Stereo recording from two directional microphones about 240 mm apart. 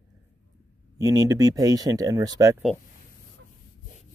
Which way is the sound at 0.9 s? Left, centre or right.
Centre.